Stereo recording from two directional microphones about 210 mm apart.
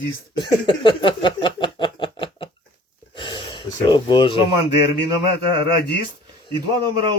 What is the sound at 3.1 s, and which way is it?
Gasp, 20° left (ahead or behind).